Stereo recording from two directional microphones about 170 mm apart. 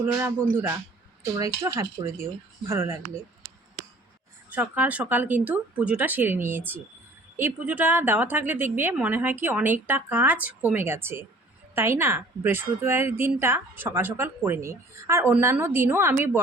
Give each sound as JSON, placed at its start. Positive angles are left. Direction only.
{"t": 0.0, "sound": "a woman's voice", "side_deg": -15}
{"t": 4.5, "sound": "a woman's voice", "side_deg": -10}